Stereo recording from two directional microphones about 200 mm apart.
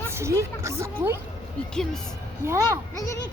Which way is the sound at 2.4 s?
15° right (ahead or behind).